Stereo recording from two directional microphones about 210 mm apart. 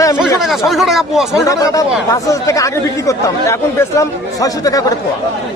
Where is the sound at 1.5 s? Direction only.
15° left (ahead or behind).